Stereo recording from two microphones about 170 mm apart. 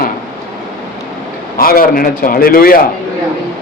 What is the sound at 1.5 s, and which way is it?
A man's voice, 60° left (ahead or behind).